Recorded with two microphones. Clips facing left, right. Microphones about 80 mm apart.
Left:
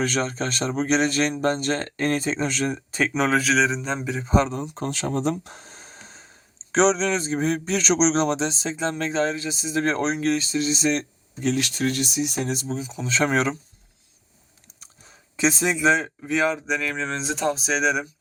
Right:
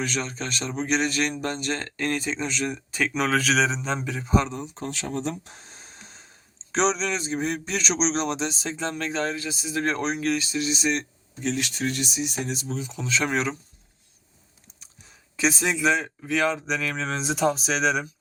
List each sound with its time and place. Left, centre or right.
0.0 s speech: left
2.7 s speech: left
3.4 s speech: centre
4.2 s speech: left
4.6 s speech: left
11.5 s speech: left
12.6 s speech: centre
13.1 s speech: left
15.4 s speech: left
16.5 s speech: centre